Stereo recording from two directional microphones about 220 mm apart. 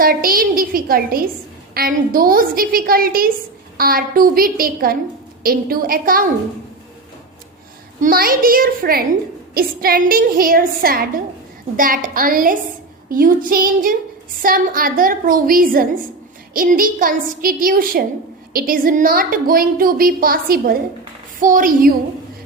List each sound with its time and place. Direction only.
0.0 s a woman's voice: 40° right (ahead or behind)
8.0 s a woman's voice: 40° right (ahead or behind)